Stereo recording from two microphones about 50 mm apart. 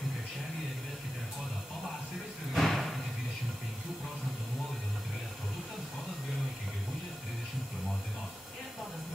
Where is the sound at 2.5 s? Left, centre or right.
Centre.